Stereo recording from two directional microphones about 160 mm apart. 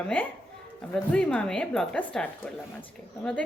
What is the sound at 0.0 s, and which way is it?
A woman's voice, 10° left (ahead or behind).